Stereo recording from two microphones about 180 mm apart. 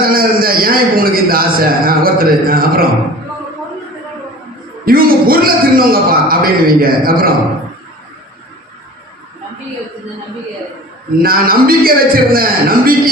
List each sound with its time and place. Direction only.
0.0 s a man's voice: 55° right (ahead or behind)
4.9 s a man's voice: 55° right (ahead or behind)
11.2 s a man's voice: 55° right (ahead or behind)